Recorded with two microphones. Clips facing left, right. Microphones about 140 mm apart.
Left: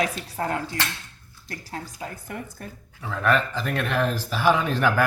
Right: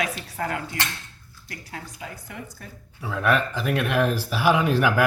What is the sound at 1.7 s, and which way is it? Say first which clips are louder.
Speech: left 3 dB; 40° left (ahead or behind).